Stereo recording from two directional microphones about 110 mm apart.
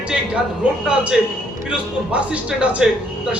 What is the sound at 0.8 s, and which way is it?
A man's voice, 5° right (ahead or behind).